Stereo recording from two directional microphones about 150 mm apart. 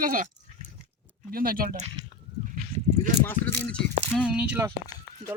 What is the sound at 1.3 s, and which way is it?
Speech, 75° right (ahead or behind).